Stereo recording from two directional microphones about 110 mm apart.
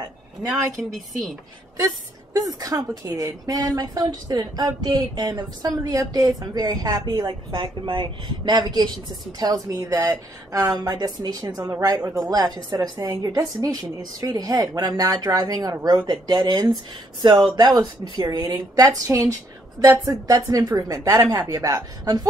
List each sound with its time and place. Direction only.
0.8 s speech: 5° right (ahead or behind)
2.3 s speech: 35° right (ahead or behind)